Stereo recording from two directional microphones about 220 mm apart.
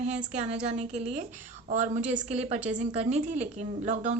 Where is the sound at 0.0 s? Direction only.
30° right (ahead or behind).